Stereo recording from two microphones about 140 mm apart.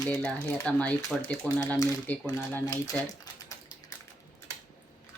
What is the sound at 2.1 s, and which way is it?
Speech, 10° left (ahead or behind).